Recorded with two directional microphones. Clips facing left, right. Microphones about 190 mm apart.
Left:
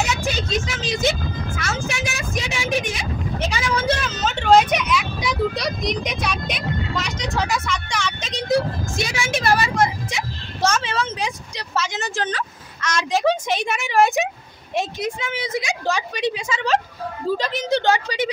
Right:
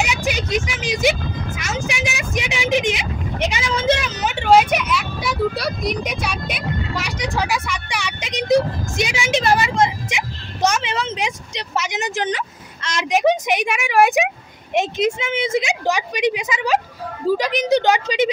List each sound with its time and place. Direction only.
0.0 s vehicle: 15° right (ahead or behind)
12.8 s a woman's voice: 20° right (ahead or behind)